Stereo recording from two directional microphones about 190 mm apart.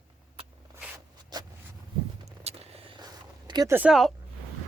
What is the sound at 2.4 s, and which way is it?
Vehicle, 35° right (ahead or behind).